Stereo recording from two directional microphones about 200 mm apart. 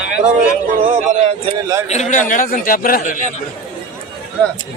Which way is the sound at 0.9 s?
35° right (ahead or behind).